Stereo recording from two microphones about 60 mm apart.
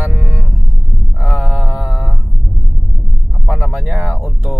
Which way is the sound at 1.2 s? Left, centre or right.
Centre.